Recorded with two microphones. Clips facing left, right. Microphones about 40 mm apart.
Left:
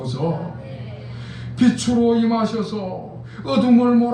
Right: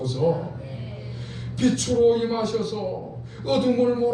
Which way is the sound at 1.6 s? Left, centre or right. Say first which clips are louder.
Left 4 dB; left.